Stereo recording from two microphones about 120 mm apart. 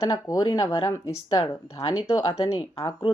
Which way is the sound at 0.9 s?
20° left (ahead or behind).